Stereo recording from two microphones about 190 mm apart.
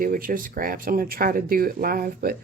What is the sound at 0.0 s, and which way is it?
Speech, 45° right (ahead or behind).